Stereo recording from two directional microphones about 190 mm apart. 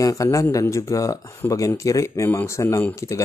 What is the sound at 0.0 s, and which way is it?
Speech, 15° left (ahead or behind).